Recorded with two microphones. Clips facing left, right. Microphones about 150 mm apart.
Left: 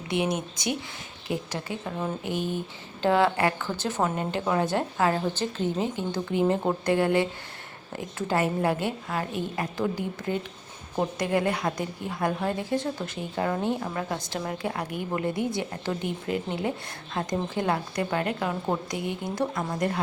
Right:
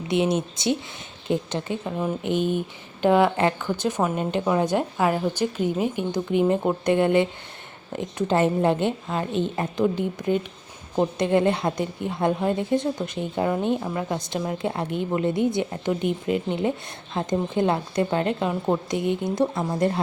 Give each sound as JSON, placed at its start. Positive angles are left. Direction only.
{"t": 0.1, "sound": "a woman's voice", "side_deg": -25}
{"t": 1.8, "sound": "a woman's voice", "side_deg": -10}